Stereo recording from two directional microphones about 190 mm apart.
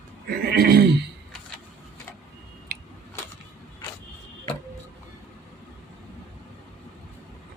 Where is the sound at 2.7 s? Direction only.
50° right (ahead or behind).